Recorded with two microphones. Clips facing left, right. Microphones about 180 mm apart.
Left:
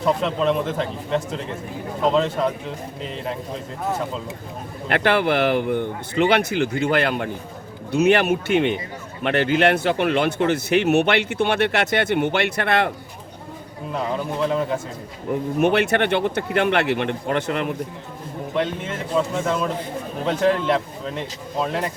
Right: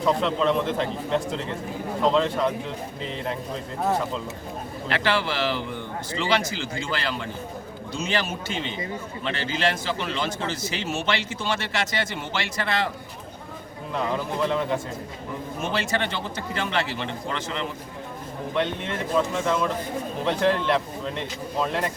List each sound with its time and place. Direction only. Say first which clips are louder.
0.0 s speech: left 2 dB; 5° left (ahead or behind)
4.9 s speech: left 6 dB; 55° left (ahead or behind)
15.3 s speech: left 11 dB; 60° left (ahead or behind)
18.5 s speech: left 2 dB; 5° left (ahead or behind)